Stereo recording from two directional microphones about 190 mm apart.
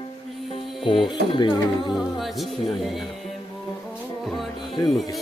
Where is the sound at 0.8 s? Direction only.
25° left (ahead or behind).